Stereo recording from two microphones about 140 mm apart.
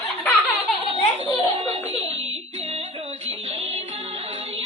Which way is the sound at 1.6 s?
50° right (ahead or behind).